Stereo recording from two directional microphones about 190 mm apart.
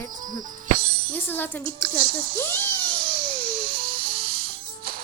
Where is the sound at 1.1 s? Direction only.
10° left (ahead or behind).